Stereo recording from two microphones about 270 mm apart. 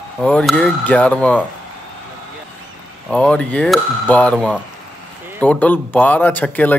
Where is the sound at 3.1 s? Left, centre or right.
Centre.